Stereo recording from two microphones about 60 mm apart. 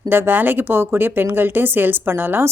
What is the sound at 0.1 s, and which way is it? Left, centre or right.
A woman's voice, right.